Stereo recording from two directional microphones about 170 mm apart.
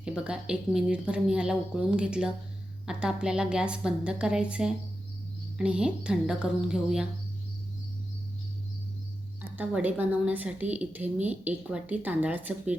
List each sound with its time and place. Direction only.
0.0 s speech: 5° right (ahead or behind)
9.6 s speech: 10° right (ahead or behind)